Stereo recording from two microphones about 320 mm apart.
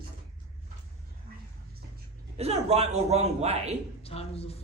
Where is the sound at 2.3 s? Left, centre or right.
Centre.